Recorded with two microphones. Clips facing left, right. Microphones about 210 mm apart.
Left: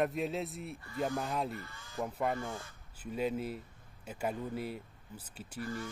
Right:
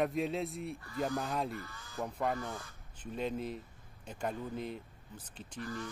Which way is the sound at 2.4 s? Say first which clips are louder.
Left 1 dB; 25° left (ahead or behind).